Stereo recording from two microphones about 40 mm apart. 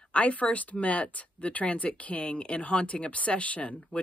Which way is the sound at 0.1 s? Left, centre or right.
Left.